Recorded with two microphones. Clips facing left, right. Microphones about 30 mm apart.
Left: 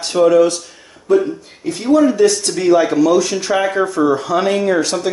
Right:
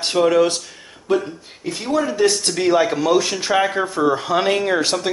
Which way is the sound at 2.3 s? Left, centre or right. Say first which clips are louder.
Left 4 dB; right.